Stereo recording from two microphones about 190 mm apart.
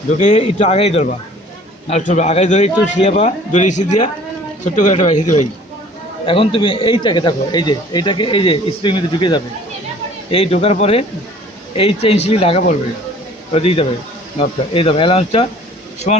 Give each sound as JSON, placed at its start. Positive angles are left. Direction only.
{"t": 0.2, "sound": "a man's voice", "side_deg": 40}
{"t": 6.2, "sound": "a man's voice", "side_deg": 30}